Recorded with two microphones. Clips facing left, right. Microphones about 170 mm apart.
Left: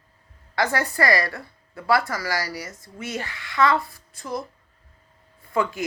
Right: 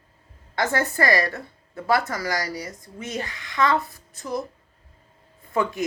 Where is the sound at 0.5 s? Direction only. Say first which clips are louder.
Even; 20° right (ahead or behind).